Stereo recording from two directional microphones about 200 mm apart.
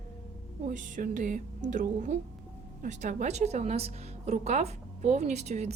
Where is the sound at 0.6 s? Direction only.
40° right (ahead or behind).